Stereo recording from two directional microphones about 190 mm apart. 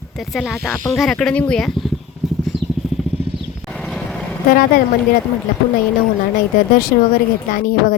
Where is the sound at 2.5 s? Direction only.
Centre (ahead or behind).